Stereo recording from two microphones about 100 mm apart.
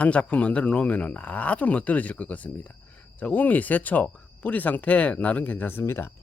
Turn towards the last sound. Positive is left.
turn(degrees=25)  # may be behind; listen again after turning